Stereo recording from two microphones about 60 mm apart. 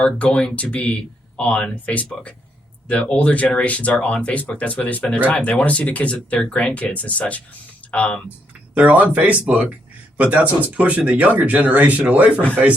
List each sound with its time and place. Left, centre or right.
0.3 s speech: left
8.7 s speech: right